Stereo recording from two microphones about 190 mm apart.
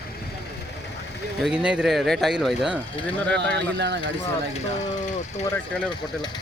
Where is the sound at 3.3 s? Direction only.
65° right (ahead or behind).